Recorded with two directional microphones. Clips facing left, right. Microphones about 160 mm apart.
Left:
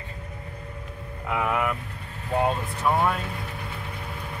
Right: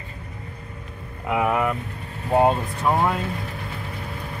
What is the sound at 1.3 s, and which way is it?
Speech, 20° right (ahead or behind).